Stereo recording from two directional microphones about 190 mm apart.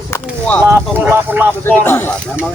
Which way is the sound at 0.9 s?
10° right (ahead or behind).